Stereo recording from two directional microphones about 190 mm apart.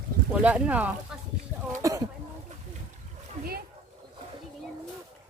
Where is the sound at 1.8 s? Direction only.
15° right (ahead or behind).